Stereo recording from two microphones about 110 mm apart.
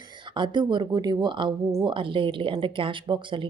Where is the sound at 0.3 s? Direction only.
45° right (ahead or behind).